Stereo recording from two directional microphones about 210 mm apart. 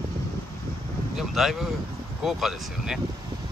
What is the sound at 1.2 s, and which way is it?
Speech, centre (ahead or behind).